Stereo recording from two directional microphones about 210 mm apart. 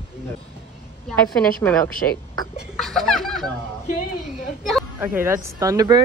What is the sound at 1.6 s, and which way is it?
Speech, 10° left (ahead or behind).